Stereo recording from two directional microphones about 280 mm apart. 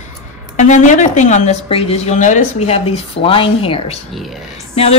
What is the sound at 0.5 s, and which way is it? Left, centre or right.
A woman's voice, left.